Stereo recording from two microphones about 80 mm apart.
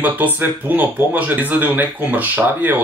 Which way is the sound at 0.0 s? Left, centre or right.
Right.